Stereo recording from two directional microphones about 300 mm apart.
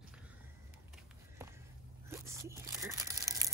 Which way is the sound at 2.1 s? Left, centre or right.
Centre.